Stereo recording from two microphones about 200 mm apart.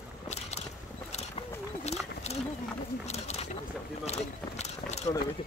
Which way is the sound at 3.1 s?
35° left (ahead or behind).